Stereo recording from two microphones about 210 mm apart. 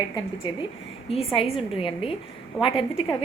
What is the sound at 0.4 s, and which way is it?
A woman's voice, 20° left (ahead or behind).